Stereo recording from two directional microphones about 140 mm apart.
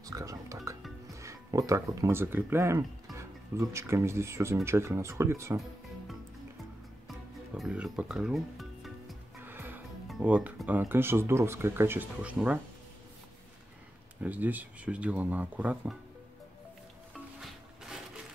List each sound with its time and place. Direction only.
0.0 s music: 25° right (ahead or behind)
1.2 s speech: 25° right (ahead or behind)
7.1 s music: centre (ahead or behind)
9.4 s music: 15° right (ahead or behind)
10.2 s speech: 10° right (ahead or behind)
14.2 s speech: 10° right (ahead or behind)